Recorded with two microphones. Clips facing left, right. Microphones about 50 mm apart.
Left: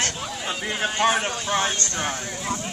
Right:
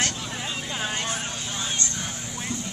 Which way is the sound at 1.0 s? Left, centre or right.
Left.